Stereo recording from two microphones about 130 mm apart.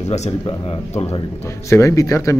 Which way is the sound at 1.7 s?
25° left (ahead or behind).